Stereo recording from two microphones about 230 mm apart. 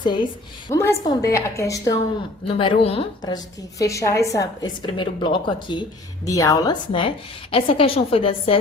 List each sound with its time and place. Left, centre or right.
0.0 s a woman's voice: centre